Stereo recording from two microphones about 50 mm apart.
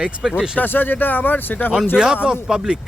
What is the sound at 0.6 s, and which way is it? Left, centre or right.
Speech, left.